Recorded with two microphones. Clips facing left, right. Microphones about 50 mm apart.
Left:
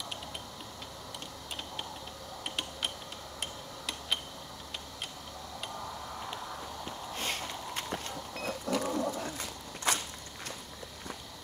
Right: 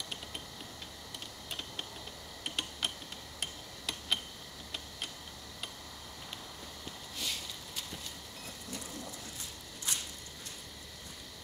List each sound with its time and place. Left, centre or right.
2.4 s mechanisms: centre
3.3 s tick-tock: centre
6.8 s vehicle: left